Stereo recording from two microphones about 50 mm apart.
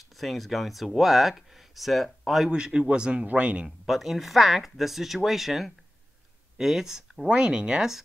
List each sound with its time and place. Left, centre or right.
0.2 s speech: centre
2.5 s speech: centre
3.6 s speech: centre